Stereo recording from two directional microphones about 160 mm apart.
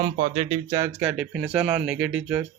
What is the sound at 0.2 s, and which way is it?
Speech, 45° right (ahead or behind).